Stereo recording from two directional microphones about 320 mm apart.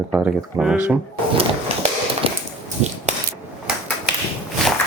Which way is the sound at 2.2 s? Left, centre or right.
Centre.